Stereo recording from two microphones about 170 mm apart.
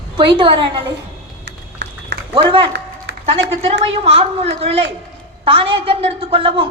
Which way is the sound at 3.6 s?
35° right (ahead or behind).